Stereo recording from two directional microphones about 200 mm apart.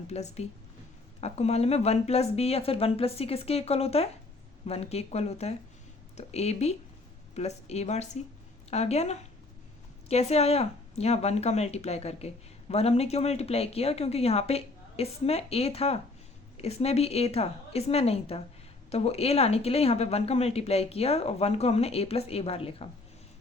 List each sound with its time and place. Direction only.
0.1 s speech: 35° left (ahead or behind)